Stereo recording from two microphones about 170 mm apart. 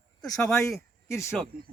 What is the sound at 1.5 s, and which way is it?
Speech, 60° right (ahead or behind).